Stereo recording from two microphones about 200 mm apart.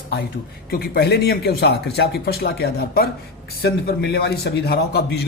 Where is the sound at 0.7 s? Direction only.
50° left (ahead or behind).